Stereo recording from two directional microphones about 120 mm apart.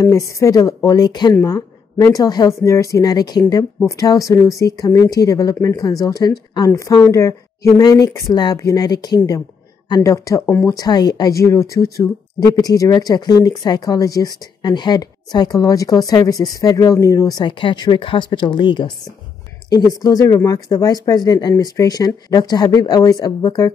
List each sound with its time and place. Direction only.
0.0 s a woman's voice: 25° left (ahead or behind)
10.4 s speech: 15° left (ahead or behind)
10.7 s a woman's voice: 30° left (ahead or behind)
19.7 s speech: 30° left (ahead or behind)